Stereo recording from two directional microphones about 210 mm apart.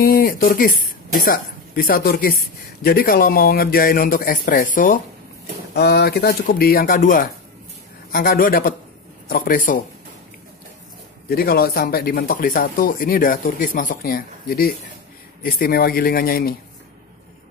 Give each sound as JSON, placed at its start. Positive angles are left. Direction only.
{"t": 0.0, "sound": "speech", "side_deg": 45}
{"t": 11.2, "sound": "speech", "side_deg": 45}